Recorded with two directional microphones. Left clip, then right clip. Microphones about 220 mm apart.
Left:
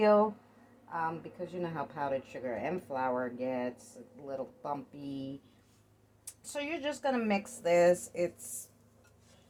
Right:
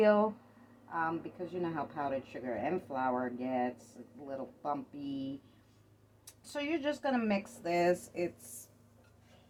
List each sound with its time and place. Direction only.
0.0 s a woman's voice: 30° left (ahead or behind)
6.2 s speech: 25° left (ahead or behind)